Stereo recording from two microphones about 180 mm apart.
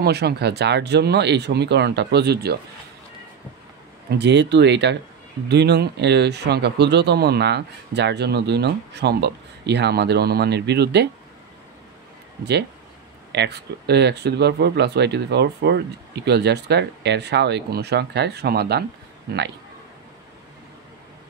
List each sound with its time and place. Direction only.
0.0 s speech: 65° right (ahead or behind)
4.2 s speech: 75° right (ahead or behind)
13.3 s speech: 70° right (ahead or behind)